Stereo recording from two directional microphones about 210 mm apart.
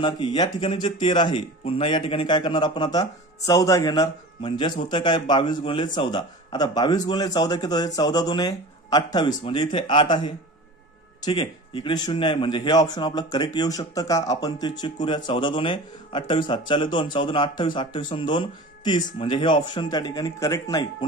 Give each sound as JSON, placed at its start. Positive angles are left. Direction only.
{"t": 0.0, "sound": "speech", "side_deg": 20}